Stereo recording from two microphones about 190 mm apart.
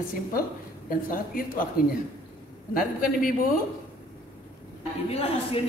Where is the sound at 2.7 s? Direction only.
50° left (ahead or behind).